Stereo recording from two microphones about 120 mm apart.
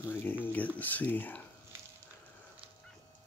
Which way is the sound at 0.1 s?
15° left (ahead or behind).